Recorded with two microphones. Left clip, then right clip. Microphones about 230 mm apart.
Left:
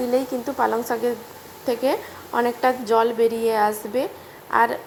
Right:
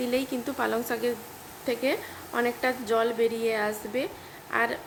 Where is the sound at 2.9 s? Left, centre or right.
Centre.